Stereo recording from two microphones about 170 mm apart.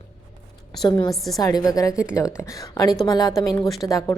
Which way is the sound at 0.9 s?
25° left (ahead or behind).